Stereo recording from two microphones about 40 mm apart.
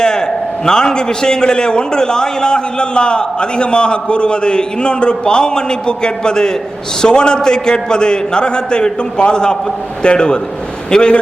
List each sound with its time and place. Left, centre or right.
0.0 s a man's voice: centre